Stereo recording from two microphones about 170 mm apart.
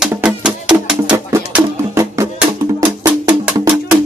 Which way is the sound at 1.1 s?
15° right (ahead or behind).